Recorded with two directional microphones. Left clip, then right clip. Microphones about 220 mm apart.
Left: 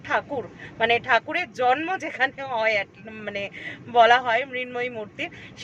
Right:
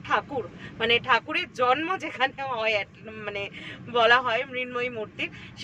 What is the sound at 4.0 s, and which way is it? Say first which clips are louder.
Speech: left 4 dB; 5° left (ahead or behind).